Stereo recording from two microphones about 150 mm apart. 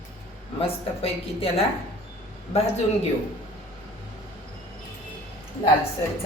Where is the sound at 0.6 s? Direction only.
40° left (ahead or behind).